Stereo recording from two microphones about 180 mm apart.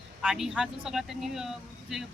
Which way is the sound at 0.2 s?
5° right (ahead or behind).